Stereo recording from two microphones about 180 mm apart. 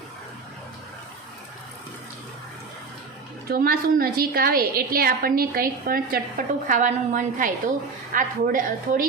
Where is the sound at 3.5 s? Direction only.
55° right (ahead or behind).